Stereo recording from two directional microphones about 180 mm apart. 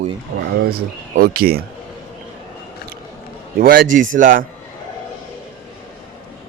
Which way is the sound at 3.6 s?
50° right (ahead or behind).